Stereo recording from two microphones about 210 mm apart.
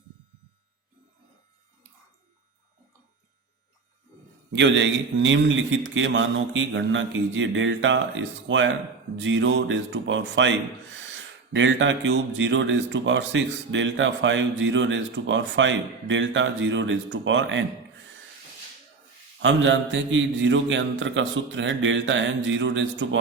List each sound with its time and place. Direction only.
4.5 s speech: 60° right (ahead or behind)
11.5 s speech: 65° right (ahead or behind)
19.4 s speech: 60° right (ahead or behind)